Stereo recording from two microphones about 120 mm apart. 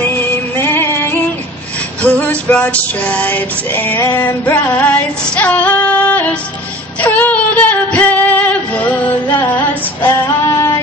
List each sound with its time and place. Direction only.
0.0 s music: 15° left (ahead or behind)
4.0 s female singing: 20° left (ahead or behind)